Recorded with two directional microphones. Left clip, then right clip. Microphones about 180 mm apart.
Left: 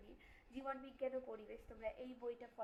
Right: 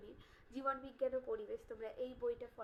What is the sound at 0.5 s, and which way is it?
A woman's voice, 25° right (ahead or behind).